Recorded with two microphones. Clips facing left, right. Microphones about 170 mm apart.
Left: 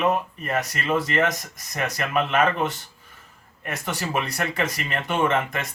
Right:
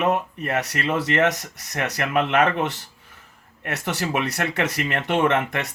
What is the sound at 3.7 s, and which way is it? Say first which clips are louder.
Speech: right 3 dB; 70° right (ahead or behind).